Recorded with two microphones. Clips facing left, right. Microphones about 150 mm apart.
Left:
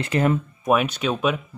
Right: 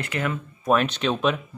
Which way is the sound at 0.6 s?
10° left (ahead or behind).